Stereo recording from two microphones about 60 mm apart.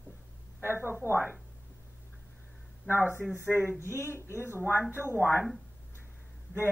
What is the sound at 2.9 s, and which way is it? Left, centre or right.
Speech, right.